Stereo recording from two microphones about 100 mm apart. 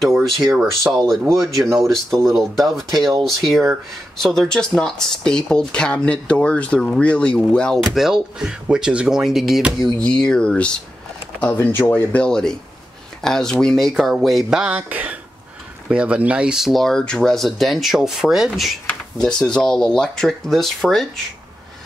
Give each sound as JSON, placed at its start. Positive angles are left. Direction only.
{"t": 0.9, "sound": "speech", "side_deg": 0}
{"t": 14.8, "sound": "speech", "side_deg": -15}
{"t": 18.9, "sound": "speech", "side_deg": 5}